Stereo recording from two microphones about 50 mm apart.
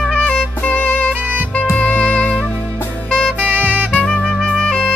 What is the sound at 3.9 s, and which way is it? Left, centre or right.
Music, left.